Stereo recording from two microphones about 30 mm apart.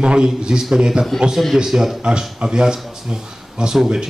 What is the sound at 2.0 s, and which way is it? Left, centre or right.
A man's voice, right.